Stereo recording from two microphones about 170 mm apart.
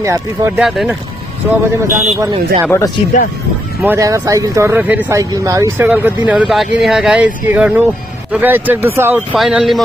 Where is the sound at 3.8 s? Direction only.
15° right (ahead or behind).